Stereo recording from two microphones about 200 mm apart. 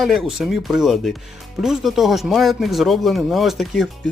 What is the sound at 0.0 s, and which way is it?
Speech, centre (ahead or behind).